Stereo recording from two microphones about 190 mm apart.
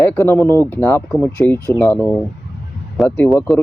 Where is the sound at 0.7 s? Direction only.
10° left (ahead or behind).